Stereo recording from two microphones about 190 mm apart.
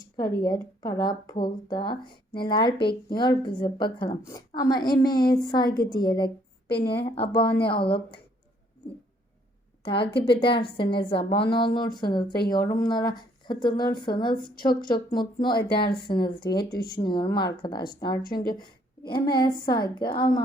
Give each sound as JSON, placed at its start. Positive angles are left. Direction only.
{"t": 0.2, "sound": "a woman's voice", "side_deg": 20}
{"t": 9.8, "sound": "speech", "side_deg": 25}
{"t": 15.1, "sound": "speech", "side_deg": 25}
{"t": 16.7, "sound": "speech", "side_deg": 50}
{"t": 17.0, "sound": "speech", "side_deg": 25}
{"t": 18.2, "sound": "speech", "side_deg": 50}
{"t": 18.4, "sound": "a sound", "side_deg": 25}
{"t": 19.2, "sound": "speech", "side_deg": 20}